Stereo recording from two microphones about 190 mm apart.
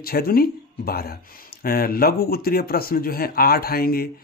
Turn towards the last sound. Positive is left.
turn(degrees=50)  # may be behind; listen again after turning